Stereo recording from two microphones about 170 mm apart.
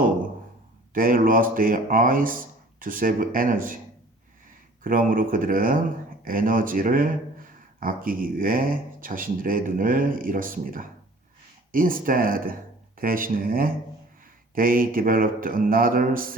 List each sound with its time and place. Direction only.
0.9 s speech: 55° right (ahead or behind)
4.8 s speech: 55° right (ahead or behind)